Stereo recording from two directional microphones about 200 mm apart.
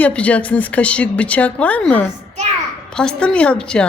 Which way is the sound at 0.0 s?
5° left (ahead or behind).